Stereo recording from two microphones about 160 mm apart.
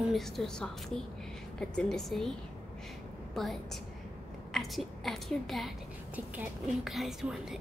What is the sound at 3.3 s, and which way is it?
A woman's voice, centre (ahead or behind).